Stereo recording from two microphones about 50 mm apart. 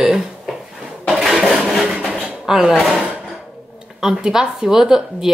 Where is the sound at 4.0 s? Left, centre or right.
Centre.